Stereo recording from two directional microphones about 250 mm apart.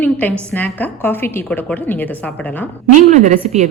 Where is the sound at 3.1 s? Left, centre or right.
Right.